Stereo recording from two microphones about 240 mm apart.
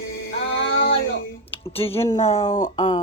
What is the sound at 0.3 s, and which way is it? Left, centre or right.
Music, left.